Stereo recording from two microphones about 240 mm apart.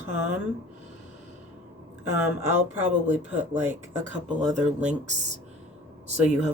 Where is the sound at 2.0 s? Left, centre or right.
Centre.